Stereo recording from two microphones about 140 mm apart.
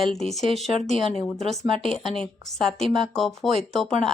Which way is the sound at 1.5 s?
40° right (ahead or behind).